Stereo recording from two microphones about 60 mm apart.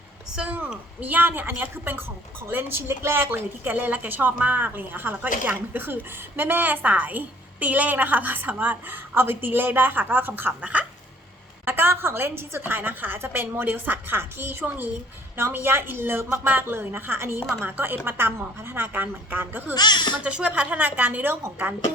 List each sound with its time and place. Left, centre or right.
0.4 s a woman's voice: right
11.6 s a woman's voice: right
20.2 s a woman's voice: right